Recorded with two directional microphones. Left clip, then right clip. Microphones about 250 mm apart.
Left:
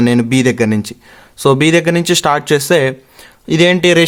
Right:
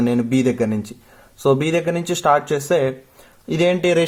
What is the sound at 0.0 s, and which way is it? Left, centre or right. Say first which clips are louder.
Speech: left 6 dB; left.